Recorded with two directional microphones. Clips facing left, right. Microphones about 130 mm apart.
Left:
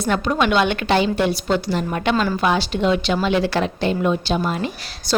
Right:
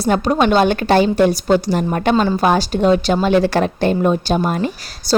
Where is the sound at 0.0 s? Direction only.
35° right (ahead or behind).